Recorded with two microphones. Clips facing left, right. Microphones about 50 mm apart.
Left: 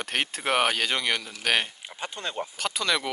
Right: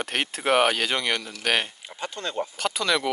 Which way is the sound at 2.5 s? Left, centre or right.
Centre.